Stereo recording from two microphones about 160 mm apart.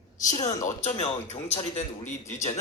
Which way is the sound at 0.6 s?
45° left (ahead or behind).